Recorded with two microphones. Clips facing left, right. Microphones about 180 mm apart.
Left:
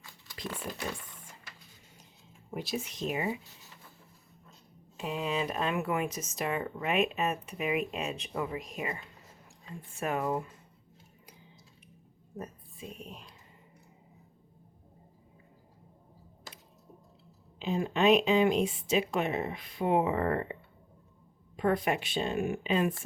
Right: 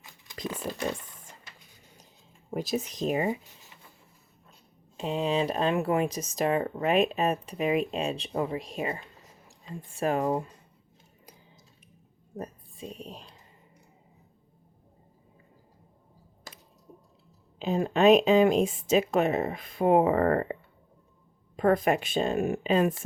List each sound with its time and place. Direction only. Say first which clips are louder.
0.5 s a sound: right 6 dB; 40° right (ahead or behind)
2.5 s speech: right 6 dB; 40° right (ahead or behind)
3.4 s writing: right 1 dB; 15° right (ahead or behind)
4.9 s speech: right 5 dB; 30° right (ahead or behind)
12.4 s a woman's voice: right 4 dB; 35° right (ahead or behind)
17.6 s speech: right 5 dB; 40° right (ahead or behind)